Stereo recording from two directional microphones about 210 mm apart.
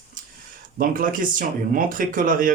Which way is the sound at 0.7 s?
40° right (ahead or behind).